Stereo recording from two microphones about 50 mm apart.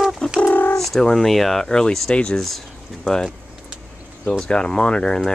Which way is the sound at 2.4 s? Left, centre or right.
Centre.